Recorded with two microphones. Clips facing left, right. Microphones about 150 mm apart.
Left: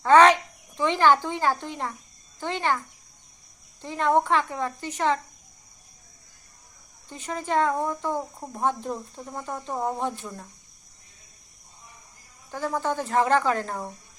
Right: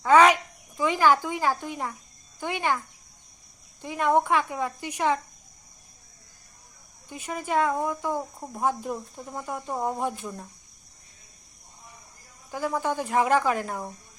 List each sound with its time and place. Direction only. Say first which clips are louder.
0.0 s a sound: left 1 dB; 10° right (ahead or behind)
0.8 s speech: left 1 dB; 10° right (ahead or behind)
7.1 s speech: left 1 dB; 10° right (ahead or behind)
12.5 s speech: even; 10° right (ahead or behind)